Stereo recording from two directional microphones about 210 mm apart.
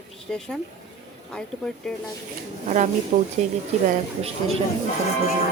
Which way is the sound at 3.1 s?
35° right (ahead or behind).